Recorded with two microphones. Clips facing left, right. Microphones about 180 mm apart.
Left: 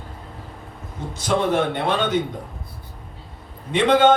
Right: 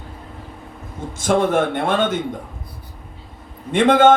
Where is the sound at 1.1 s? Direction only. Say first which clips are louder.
Right 3 dB; 50° right (ahead or behind).